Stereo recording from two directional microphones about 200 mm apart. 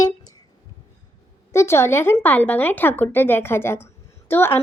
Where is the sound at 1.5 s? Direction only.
15° left (ahead or behind).